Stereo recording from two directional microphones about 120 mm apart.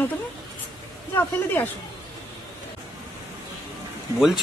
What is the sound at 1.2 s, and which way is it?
Speech, 15° left (ahead or behind).